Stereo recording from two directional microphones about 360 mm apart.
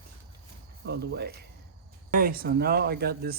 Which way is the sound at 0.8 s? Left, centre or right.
Right.